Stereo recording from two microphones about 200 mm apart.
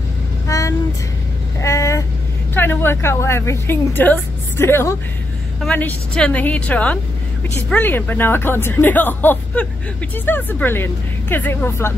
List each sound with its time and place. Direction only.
0.5 s vehicle: 15° left (ahead or behind)
2.5 s a woman's voice: 10° left (ahead or behind)